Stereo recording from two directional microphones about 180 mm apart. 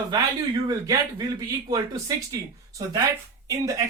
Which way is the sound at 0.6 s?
20° right (ahead or behind).